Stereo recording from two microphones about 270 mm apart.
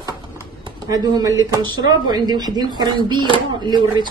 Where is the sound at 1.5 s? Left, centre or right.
Centre.